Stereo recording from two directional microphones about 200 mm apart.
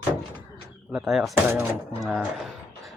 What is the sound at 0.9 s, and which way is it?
Speech, centre (ahead or behind).